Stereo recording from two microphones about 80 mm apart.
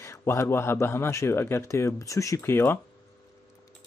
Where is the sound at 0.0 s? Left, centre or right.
Left.